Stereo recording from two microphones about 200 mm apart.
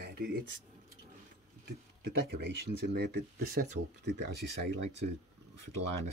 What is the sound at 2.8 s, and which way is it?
Speech, 55° right (ahead or behind).